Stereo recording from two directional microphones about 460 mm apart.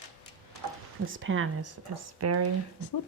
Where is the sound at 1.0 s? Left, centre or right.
Right.